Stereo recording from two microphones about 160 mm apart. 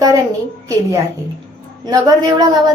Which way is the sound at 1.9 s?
25° right (ahead or behind).